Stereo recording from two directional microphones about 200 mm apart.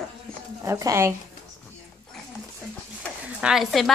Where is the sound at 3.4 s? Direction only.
Centre (ahead or behind).